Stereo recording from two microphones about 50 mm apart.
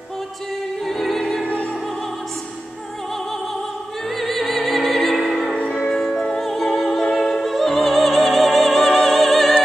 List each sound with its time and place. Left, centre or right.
0.8 s music: centre
1.4 s opera: left
4.2 s opera: centre
5.9 s music: centre
7.2 s opera: centre
8.7 s music: centre